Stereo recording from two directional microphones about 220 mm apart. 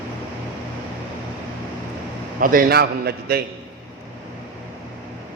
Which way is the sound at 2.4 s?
40° right (ahead or behind).